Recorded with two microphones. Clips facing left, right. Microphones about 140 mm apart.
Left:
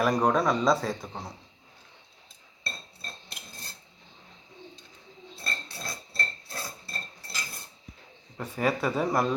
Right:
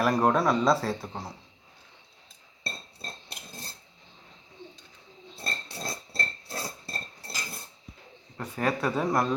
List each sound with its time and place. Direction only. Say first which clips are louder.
0.0 s a man's voice: even; 5° right (ahead or behind)
5.4 s a sound: right 2 dB; 25° right (ahead or behind)
8.4 s a man's voice: left 1 dB; 5° left (ahead or behind)